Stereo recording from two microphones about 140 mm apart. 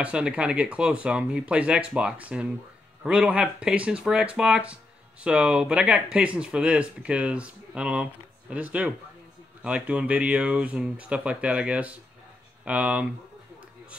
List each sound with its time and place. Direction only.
0.0 s speech: 10° right (ahead or behind)